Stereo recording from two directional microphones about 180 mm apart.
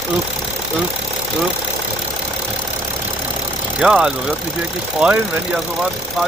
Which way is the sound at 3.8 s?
5° right (ahead or behind).